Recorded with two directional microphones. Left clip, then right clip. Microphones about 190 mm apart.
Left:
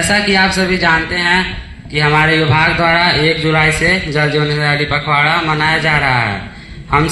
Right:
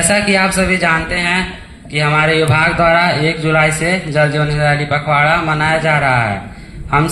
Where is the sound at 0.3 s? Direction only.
35° right (ahead or behind).